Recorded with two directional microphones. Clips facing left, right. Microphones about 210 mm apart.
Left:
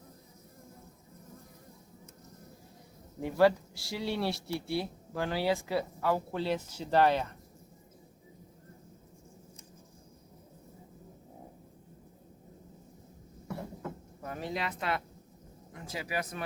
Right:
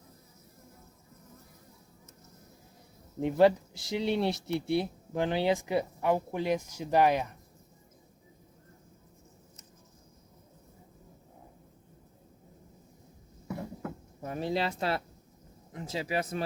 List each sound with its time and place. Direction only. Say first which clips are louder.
3.2 s speech: right 2 dB; 20° right (ahead or behind)
14.2 s speech: right 6 dB; 25° right (ahead or behind)